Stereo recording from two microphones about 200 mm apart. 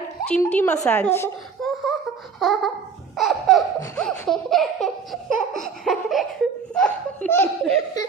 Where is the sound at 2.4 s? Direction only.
Centre (ahead or behind).